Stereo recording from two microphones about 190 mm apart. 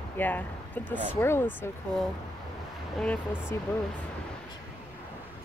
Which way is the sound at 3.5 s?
15° left (ahead or behind).